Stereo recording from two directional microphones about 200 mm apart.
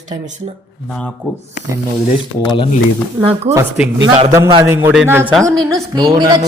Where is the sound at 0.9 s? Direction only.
5° left (ahead or behind).